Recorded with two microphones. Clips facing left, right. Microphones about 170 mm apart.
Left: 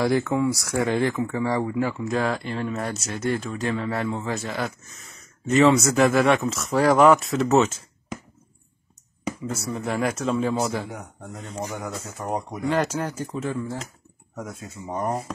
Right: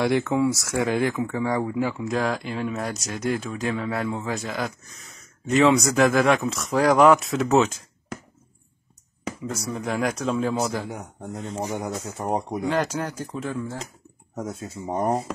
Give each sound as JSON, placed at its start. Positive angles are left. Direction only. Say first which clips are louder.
{"t": 0.0, "sound": "speech", "louder": "even", "side_deg": 0}
{"t": 9.5, "sound": "speech", "louder": "even", "side_deg": 5}
{"t": 11.6, "sound": "a man's voice", "louder": "right 2 dB", "side_deg": -15}
{"t": 12.7, "sound": "speech", "louder": "left 4 dB", "side_deg": 10}
{"t": 14.3, "sound": "a man's voice", "louder": "right 4 dB", "side_deg": -30}